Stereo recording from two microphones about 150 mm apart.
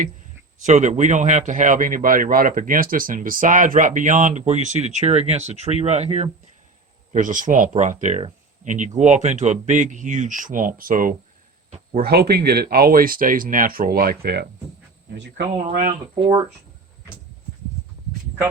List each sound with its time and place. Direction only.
0.6 s a man's voice: 55° right (ahead or behind)
7.1 s a man's voice: 60° right (ahead or behind)
11.9 s speech: 90° right
15.4 s a man's voice: 65° right (ahead or behind)